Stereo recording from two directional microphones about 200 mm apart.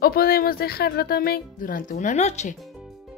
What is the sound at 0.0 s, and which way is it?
A woman's voice, 50° left (ahead or behind).